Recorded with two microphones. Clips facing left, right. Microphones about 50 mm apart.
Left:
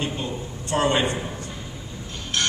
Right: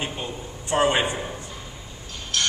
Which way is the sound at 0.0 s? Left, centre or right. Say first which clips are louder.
Left 2 dB; centre.